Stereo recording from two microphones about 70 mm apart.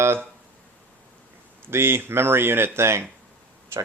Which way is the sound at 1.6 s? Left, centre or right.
Right.